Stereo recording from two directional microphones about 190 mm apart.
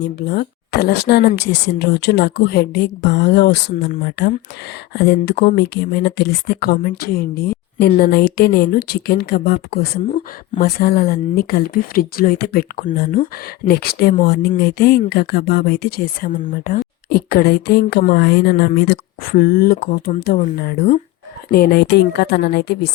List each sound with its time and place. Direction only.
0.0 s speech: 60° left (ahead or behind)